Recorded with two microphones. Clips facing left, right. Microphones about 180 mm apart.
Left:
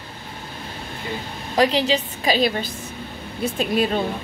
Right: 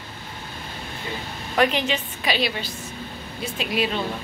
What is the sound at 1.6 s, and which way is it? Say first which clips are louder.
A woman's voice: left 3 dB; 35° left (ahead or behind).